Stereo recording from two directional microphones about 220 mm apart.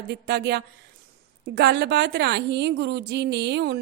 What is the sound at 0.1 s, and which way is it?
A woman's voice, 50° right (ahead or behind).